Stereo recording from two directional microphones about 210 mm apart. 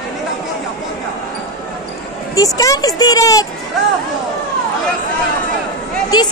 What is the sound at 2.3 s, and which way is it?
Speech, 15° left (ahead or behind).